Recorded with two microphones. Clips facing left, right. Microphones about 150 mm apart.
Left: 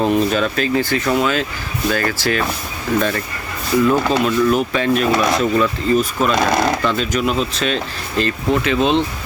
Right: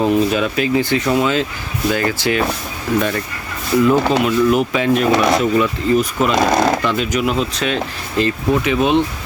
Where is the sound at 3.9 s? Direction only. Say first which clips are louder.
Right 2 dB; 15° right (ahead or behind).